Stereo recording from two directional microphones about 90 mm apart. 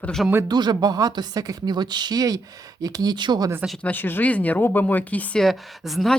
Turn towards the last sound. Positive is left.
turn(degrees=0)  # may be behind; listen again after turning